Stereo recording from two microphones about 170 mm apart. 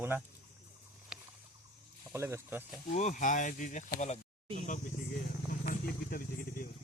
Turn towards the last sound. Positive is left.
turn(degrees=60)  # may be behind; listen again after turning